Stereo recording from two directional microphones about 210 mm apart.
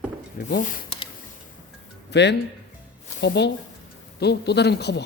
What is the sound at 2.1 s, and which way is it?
Speech, 55° left (ahead or behind).